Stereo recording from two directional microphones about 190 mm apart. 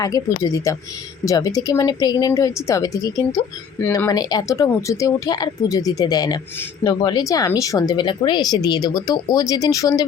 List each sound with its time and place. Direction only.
0.0 s speech: 20° left (ahead or behind)